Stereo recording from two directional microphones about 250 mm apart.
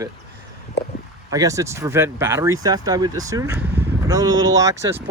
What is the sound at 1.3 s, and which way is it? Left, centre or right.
Speech, centre.